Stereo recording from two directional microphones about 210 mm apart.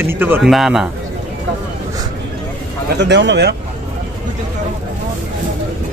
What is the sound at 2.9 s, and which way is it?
Speech, 55° right (ahead or behind).